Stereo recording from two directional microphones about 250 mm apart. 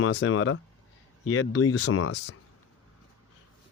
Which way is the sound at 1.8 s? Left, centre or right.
Left.